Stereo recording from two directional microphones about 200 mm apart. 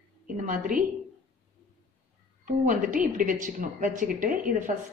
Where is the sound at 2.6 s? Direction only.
45° right (ahead or behind).